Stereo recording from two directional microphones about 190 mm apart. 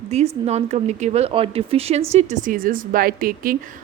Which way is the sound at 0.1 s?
35° right (ahead or behind).